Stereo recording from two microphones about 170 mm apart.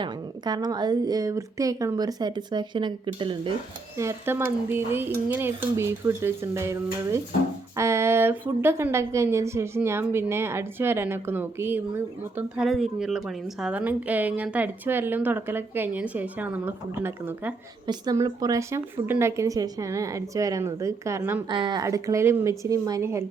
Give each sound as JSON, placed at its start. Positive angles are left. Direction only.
{"t": 0.0, "sound": "a woman's voice", "side_deg": -25}
{"t": 3.9, "sound": "a woman's voice", "side_deg": -15}
{"t": 21.5, "sound": "a woman's voice", "side_deg": -25}